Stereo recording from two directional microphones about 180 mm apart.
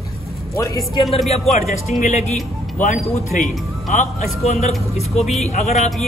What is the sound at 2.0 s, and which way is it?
Speech, 40° left (ahead or behind).